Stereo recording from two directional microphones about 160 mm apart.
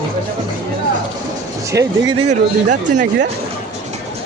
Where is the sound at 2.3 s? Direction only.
50° right (ahead or behind).